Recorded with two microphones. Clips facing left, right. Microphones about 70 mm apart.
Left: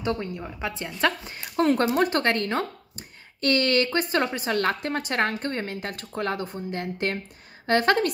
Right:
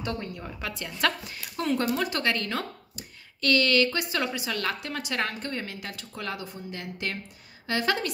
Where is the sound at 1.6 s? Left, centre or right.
Left.